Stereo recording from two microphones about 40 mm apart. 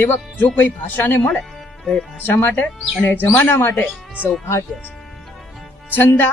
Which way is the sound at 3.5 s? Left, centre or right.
Left.